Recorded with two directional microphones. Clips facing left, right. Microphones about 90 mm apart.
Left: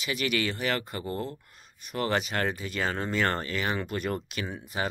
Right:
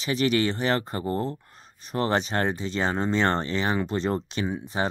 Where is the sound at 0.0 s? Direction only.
30° right (ahead or behind).